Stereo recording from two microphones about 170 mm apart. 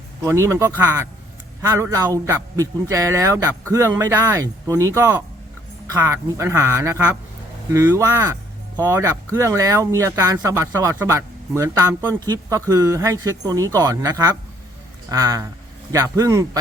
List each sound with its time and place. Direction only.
0.3 s speech: 15° right (ahead or behind)